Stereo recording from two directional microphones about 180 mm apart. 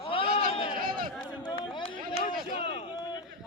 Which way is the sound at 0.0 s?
30° left (ahead or behind).